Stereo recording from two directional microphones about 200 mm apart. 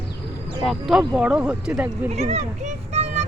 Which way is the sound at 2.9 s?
35° right (ahead or behind).